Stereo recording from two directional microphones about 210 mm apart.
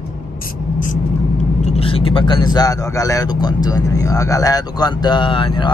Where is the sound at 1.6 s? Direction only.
30° left (ahead or behind).